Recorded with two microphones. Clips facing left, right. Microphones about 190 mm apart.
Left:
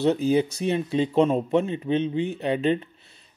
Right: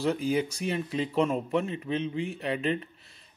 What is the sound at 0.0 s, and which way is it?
Speech, 25° left (ahead or behind).